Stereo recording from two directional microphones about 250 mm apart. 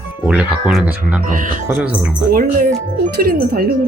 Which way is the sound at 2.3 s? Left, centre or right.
Right.